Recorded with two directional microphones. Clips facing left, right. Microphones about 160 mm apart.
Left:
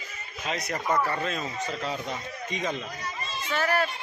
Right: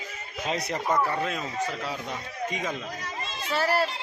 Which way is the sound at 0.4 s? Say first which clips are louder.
Right 2 dB; 30° right (ahead or behind).